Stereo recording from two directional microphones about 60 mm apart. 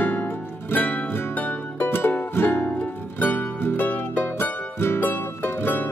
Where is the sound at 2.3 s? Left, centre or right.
Left.